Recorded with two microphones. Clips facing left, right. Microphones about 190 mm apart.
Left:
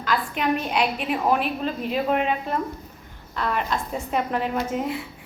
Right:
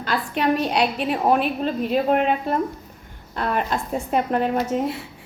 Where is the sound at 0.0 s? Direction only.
35° right (ahead or behind).